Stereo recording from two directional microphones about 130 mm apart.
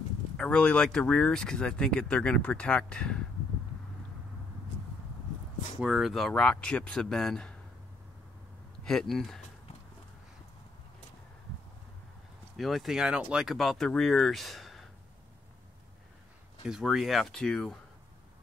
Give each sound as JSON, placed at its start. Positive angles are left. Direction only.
{"t": 0.4, "sound": "speech", "side_deg": 10}
{"t": 5.8, "sound": "speech", "side_deg": 0}
{"t": 8.8, "sound": "speech", "side_deg": 5}
{"t": 12.5, "sound": "speech", "side_deg": 0}
{"t": 16.6, "sound": "speech", "side_deg": -5}